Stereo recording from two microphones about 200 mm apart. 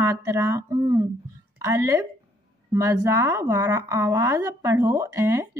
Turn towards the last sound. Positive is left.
turn(degrees=-15)  # may be behind; listen again after turning